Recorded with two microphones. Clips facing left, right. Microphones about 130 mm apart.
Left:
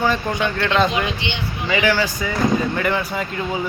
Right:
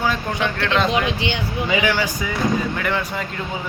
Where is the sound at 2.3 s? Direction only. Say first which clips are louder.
Left 3 dB; centre (ahead or behind).